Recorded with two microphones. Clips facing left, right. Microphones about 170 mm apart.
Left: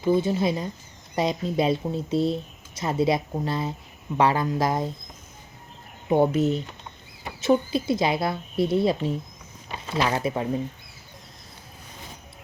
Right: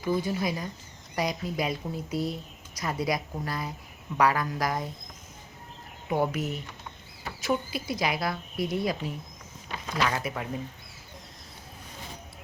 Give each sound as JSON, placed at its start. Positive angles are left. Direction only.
{"t": 0.0, "sound": "speech", "side_deg": 25}
{"t": 6.1, "sound": "speech", "side_deg": 25}